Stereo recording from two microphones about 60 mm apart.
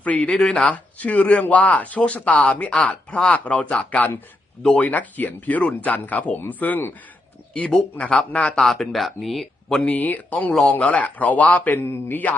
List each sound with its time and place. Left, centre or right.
0.0 s speech: left
7.5 s speech: left
8.5 s speech: centre
9.8 s speech: left